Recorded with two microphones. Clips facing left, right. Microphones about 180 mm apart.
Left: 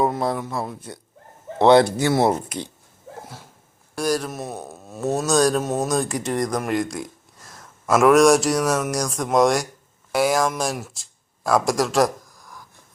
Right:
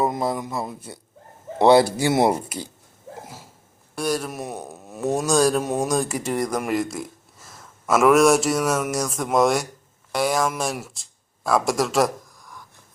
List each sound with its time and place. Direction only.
0.0 s speech: 5° right (ahead or behind)
3.9 s speech: centre (ahead or behind)
4.3 s speech: 15° right (ahead or behind)